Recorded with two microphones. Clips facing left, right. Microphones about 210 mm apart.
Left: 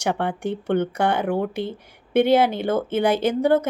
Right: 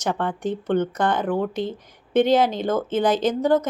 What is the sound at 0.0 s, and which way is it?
Speech, 10° left (ahead or behind).